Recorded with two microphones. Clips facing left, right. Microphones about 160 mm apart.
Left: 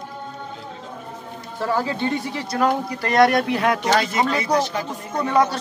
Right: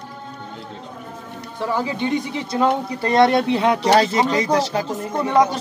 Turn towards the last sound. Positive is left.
turn(degrees=-20)  # may be behind; listen again after turning